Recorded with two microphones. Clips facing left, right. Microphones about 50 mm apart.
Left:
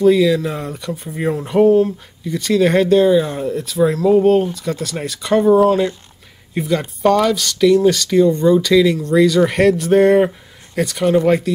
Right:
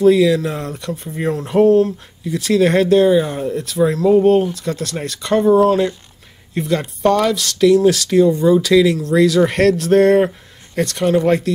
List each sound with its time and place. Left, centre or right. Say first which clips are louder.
0.0 s speech: right 1 dB; centre
2.2 s speech: even; centre